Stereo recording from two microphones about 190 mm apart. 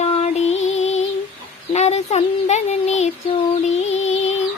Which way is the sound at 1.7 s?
35° left (ahead or behind).